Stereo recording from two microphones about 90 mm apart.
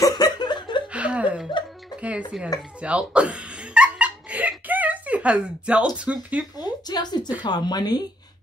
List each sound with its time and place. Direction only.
0.0 s laughter: 50° left (ahead or behind)
0.9 s chuckle: 15° right (ahead or behind)
2.0 s music: 15° right (ahead or behind)
5.9 s speech: 15° right (ahead or behind)
6.6 s a sound: 50° left (ahead or behind)
7.4 s speech: 50° left (ahead or behind)